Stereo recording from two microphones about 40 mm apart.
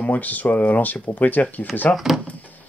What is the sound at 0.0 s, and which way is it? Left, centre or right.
Speech, left.